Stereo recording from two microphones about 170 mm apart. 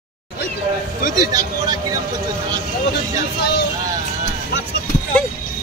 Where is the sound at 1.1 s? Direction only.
20° right (ahead or behind).